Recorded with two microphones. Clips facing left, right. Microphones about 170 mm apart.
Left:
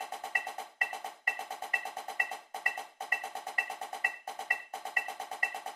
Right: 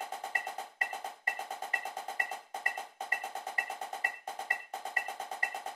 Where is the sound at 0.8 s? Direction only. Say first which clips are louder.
Even; 25° right (ahead or behind).